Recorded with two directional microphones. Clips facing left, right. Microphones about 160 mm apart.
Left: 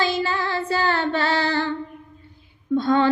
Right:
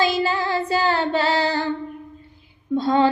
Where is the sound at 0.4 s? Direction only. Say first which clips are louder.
Right 2 dB; 15° right (ahead or behind).